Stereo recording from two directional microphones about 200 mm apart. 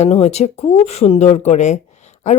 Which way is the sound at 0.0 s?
35° left (ahead or behind).